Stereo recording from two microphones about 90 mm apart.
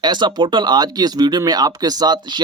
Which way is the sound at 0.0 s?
55° right (ahead or behind).